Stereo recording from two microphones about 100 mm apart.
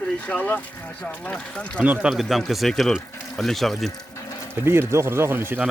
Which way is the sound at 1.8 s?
15° right (ahead or behind).